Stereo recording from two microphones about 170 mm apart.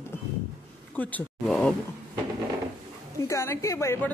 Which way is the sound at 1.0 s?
10° left (ahead or behind).